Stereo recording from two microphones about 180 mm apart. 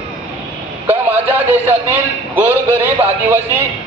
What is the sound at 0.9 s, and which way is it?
A man's voice, 10° right (ahead or behind).